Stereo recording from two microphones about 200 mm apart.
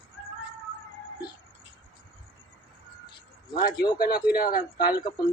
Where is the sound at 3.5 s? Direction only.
50° left (ahead or behind).